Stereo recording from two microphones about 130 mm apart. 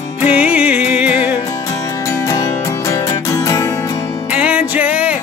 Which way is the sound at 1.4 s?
25° left (ahead or behind).